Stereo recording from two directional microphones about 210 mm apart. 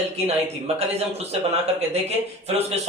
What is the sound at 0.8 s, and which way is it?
Speech, 30° right (ahead or behind).